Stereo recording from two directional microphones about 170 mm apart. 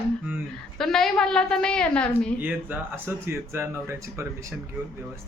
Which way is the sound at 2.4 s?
10° right (ahead or behind).